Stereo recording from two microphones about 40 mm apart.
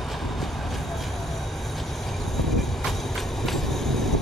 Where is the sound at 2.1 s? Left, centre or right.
Centre.